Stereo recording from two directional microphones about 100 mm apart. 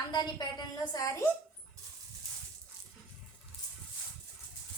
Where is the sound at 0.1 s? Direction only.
45° left (ahead or behind).